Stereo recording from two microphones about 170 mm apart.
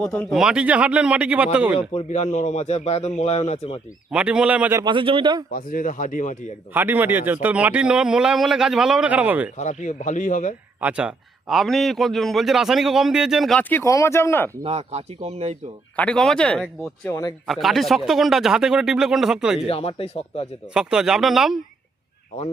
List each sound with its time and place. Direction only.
0.0 s speech: 5° left (ahead or behind)
1.9 s a man's voice: 40° left (ahead or behind)
4.1 s speech: 5° right (ahead or behind)
4.8 s speech: 30° right (ahead or behind)
5.5 s speech: 55° left (ahead or behind)
6.7 s a man's voice: 10° right (ahead or behind)
9.6 s speech: 45° left (ahead or behind)
10.8 s a man's voice: 10° right (ahead or behind); by 14.5 s 15° left (ahead or behind)
14.6 s speech: 40° right (ahead or behind)
16.0 s a man's voice: 5° left (ahead or behind)
19.6 s a man's voice: 35° left (ahead or behind)
20.7 s a man's voice: 5° right (ahead or behind)